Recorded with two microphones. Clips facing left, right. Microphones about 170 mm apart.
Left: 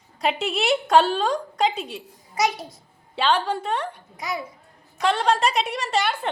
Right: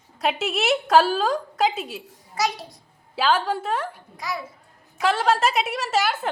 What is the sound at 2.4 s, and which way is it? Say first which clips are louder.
Speech: left 2 dB; 20° left (ahead or behind).